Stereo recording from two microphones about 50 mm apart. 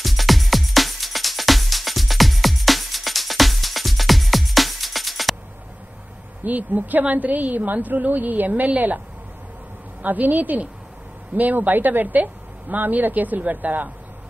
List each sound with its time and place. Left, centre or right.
0.0 s music: centre
6.4 s a woman's voice: right
10.0 s a woman's voice: right